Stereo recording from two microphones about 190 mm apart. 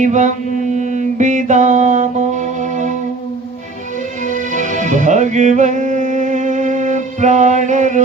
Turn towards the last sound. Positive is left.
turn(degrees=-40)  # may be behind; listen again after turning